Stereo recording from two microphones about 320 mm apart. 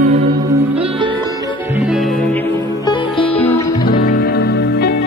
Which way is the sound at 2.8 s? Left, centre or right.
Centre.